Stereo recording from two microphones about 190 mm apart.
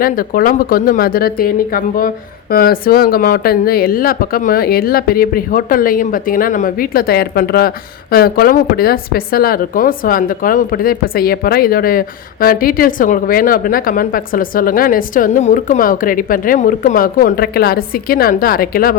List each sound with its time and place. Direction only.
0.0 s a woman's voice: 50° left (ahead or behind)